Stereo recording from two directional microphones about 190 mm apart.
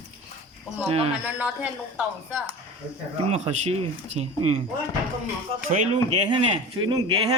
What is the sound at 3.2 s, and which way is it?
Speech, 35° right (ahead or behind).